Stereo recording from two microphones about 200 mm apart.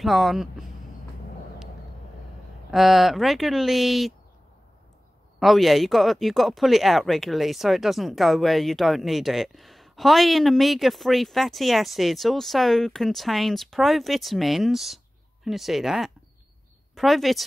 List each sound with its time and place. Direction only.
0.0 s speech: centre (ahead or behind)
2.7 s speech: centre (ahead or behind)
5.4 s a woman's voice: centre (ahead or behind)